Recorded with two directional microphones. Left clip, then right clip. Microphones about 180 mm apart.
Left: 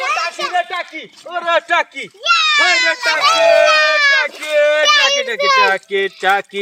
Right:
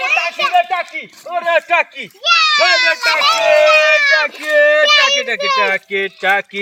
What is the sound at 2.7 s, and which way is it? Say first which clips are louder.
Speech: right 1 dB; 50° left (ahead or behind).